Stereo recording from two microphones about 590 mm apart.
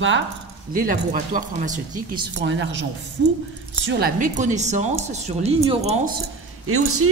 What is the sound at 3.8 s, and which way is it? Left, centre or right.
A woman's voice, centre.